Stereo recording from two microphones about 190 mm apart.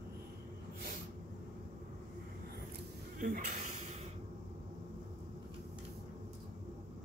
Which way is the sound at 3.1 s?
45° right (ahead or behind).